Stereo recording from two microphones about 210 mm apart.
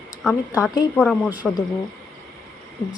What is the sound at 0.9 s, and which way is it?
Speech, 5° left (ahead or behind).